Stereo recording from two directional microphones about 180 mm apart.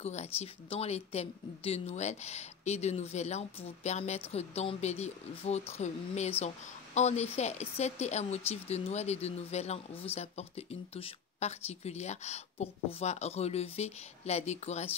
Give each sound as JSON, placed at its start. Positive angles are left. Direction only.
{"t": 0.0, "sound": "speech", "side_deg": 35}